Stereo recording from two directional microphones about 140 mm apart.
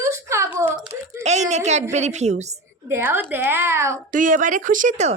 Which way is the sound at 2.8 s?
15° right (ahead or behind).